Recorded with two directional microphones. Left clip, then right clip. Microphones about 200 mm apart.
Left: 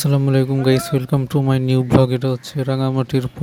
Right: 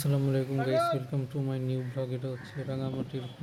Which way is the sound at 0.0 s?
50° left (ahead or behind).